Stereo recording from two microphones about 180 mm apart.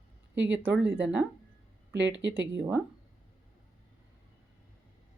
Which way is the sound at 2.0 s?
80° right.